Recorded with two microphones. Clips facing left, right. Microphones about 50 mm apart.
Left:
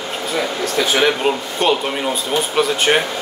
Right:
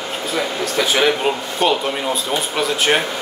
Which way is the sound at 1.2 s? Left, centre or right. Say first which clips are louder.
Even; centre.